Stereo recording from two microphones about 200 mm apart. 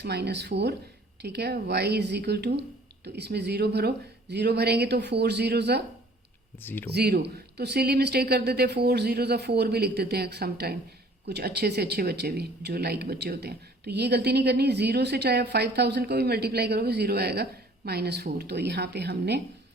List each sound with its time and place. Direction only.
0.0 s speech: 55° right (ahead or behind)
6.6 s speech: 10° left (ahead or behind)
6.9 s speech: 55° right (ahead or behind)